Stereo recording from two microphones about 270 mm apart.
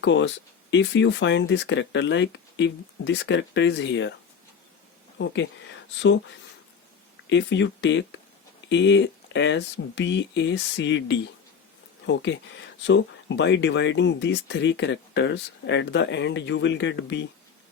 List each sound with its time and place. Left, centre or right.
0.0 s speech: left
5.1 s speech: left
7.3 s speech: left